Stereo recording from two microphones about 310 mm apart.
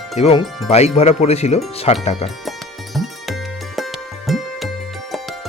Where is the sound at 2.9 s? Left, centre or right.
Centre.